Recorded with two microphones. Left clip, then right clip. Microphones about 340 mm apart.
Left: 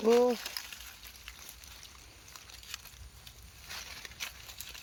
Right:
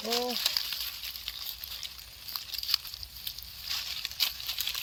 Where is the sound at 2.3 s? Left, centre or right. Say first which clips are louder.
Right 15 dB; centre.